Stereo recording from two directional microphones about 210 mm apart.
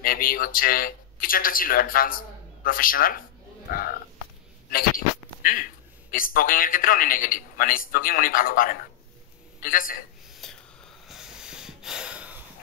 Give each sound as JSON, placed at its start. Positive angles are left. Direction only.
{"t": 0.0, "sound": "speech", "side_deg": 45}
{"t": 4.6, "sound": "a man's voice", "side_deg": 45}
{"t": 10.3, "sound": "whispering", "side_deg": 0}
{"t": 11.1, "sound": "snort", "side_deg": -5}